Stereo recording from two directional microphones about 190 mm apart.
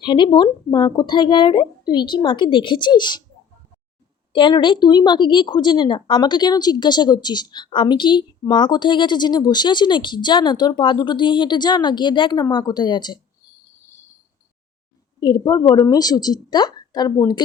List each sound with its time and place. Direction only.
0.0 s a woman's voice: 25° left (ahead or behind)
4.3 s a woman's voice: 25° left (ahead or behind)
15.2 s a woman's voice: 20° left (ahead or behind)